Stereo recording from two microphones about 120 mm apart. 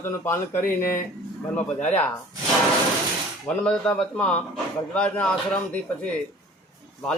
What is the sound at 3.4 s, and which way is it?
A man's voice, 10° left (ahead or behind).